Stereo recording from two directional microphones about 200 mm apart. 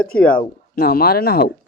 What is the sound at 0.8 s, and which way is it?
Speech, 50° left (ahead or behind).